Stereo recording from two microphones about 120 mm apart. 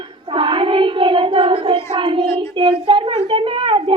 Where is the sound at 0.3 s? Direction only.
45° right (ahead or behind).